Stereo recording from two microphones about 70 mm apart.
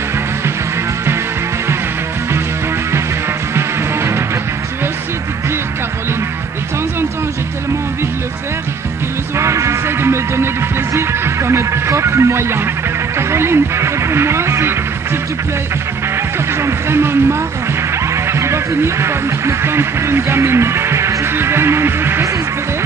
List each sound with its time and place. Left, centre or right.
3.5 s music: right
9.4 s music: right
13.2 s a sound: right
16.5 s speech: right